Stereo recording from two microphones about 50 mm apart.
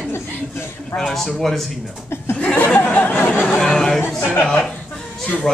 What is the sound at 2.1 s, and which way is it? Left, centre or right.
Speech, left.